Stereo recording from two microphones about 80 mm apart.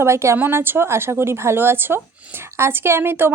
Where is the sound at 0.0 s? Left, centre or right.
Right.